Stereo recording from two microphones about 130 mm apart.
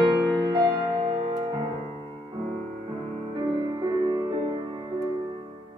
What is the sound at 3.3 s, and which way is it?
Music, 35° right (ahead or behind).